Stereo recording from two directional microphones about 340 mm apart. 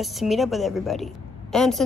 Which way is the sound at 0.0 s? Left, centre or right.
Centre.